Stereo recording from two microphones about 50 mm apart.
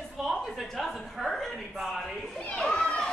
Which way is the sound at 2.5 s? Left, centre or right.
Centre.